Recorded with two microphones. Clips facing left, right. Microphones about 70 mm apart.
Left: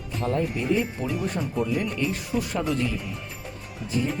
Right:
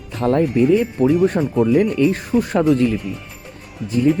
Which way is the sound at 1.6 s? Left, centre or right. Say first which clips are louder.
Right 14 dB; right.